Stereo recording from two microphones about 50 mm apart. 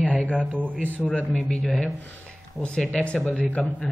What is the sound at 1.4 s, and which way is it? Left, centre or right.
Speech, centre.